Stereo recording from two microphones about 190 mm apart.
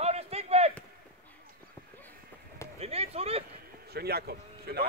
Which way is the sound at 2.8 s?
30° right (ahead or behind).